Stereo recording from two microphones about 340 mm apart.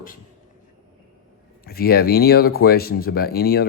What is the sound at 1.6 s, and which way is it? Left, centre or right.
Speech, left.